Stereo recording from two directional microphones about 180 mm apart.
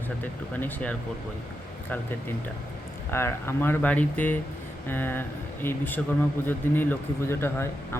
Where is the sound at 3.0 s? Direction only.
15° left (ahead or behind).